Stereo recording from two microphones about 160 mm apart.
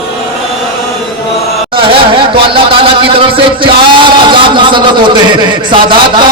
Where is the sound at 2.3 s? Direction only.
35° right (ahead or behind).